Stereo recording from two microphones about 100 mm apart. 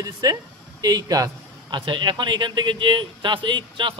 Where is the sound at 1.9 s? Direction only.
50° right (ahead or behind).